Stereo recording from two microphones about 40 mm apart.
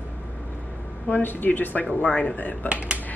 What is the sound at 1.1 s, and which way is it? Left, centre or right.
Speech, left.